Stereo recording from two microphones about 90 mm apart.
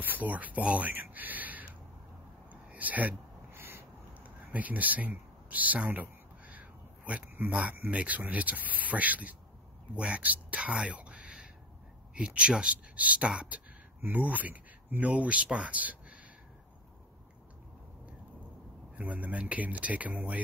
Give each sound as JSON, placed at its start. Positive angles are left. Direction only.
{"t": 0.0, "sound": "speech", "side_deg": -20}
{"t": 2.5, "sound": "a sound", "side_deg": -15}
{"t": 7.9, "sound": "speech", "side_deg": -15}
{"t": 18.9, "sound": "speech", "side_deg": -15}